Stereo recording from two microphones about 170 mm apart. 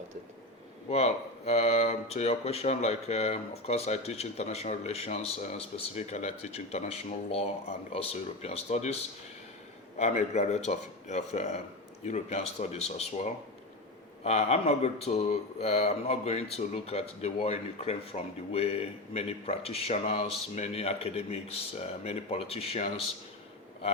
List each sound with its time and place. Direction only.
0.9 s speech: 40° left (ahead or behind)
10.0 s speech: 40° left (ahead or behind)